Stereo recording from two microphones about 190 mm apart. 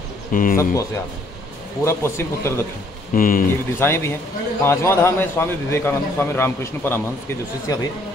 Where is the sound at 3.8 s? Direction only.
15° left (ahead or behind).